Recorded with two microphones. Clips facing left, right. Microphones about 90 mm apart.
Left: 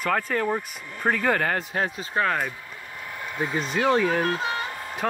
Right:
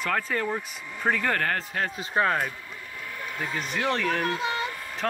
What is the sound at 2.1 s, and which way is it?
Speech, 10° right (ahead or behind).